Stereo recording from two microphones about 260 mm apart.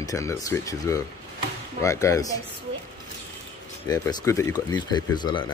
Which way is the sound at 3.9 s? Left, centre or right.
Centre.